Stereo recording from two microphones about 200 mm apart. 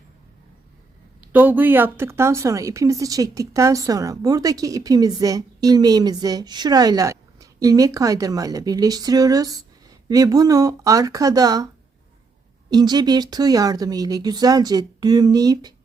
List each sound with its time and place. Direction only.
1.2 s a woman's voice: 10° right (ahead or behind)
12.7 s speech: 20° right (ahead or behind)